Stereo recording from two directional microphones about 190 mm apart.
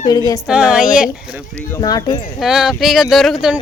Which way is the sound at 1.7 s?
20° left (ahead or behind).